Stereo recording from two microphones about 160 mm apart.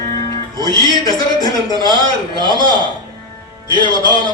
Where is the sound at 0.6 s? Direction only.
25° left (ahead or behind).